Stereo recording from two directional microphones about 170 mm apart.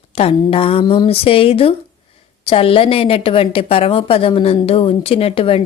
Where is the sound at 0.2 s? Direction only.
35° left (ahead or behind).